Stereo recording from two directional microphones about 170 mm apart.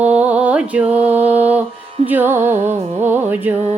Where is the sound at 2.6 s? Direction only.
40° right (ahead or behind).